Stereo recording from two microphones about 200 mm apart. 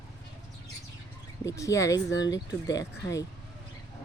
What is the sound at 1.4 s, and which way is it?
Speech, 15° left (ahead or behind).